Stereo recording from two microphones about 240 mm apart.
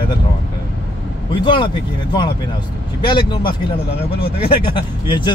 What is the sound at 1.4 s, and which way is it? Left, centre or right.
Speech, centre.